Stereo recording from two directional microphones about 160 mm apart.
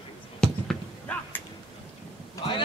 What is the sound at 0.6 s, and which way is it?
Basketball bounce, 10° left (ahead or behind).